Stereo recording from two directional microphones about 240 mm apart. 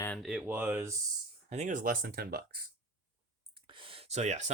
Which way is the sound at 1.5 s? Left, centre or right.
Right.